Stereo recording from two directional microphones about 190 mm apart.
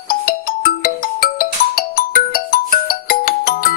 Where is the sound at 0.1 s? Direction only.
50° left (ahead or behind).